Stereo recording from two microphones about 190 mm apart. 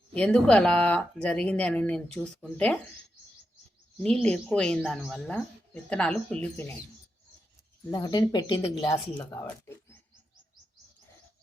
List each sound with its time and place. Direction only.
0.1 s speech: 5° left (ahead or behind)
4.0 s speech: 5° left (ahead or behind)
7.9 s speech: 20° left (ahead or behind)